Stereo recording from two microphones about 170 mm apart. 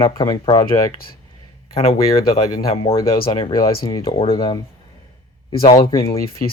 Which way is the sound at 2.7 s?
35° left (ahead or behind).